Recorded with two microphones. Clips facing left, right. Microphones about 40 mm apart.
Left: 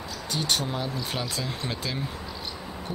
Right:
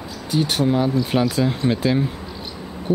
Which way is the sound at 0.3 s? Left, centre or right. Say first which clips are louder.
Right 9 dB; centre.